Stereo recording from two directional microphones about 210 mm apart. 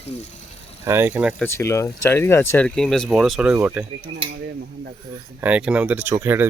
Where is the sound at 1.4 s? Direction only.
15° left (ahead or behind); by 3.9 s 10° right (ahead or behind).